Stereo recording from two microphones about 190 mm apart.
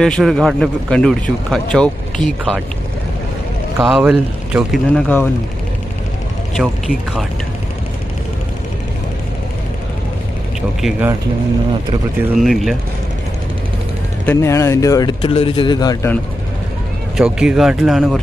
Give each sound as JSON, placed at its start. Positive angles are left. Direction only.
{"t": 0.0, "sound": "speech", "side_deg": 0}
{"t": 3.8, "sound": "speech", "side_deg": 0}
{"t": 6.5, "sound": "speech", "side_deg": 0}
{"t": 10.8, "sound": "speech", "side_deg": -5}
{"t": 12.4, "sound": "speech", "side_deg": 0}
{"t": 14.2, "sound": "speech", "side_deg": 15}
{"t": 17.2, "sound": "speech", "side_deg": -5}